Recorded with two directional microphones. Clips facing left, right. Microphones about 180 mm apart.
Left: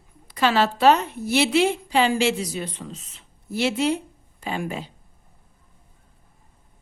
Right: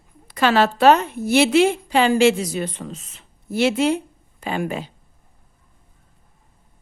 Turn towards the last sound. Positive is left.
turn(degrees=-65)  # may be behind; listen again after turning